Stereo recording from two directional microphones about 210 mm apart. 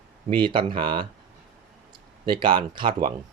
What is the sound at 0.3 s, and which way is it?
Speech, 20° right (ahead or behind).